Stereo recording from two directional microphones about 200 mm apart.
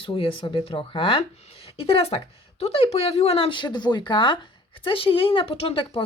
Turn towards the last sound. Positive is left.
turn(degrees=30)  # may be behind; listen again after turning